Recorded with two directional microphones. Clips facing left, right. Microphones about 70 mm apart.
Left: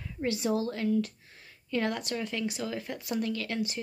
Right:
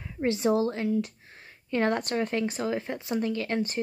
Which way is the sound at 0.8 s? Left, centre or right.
Centre.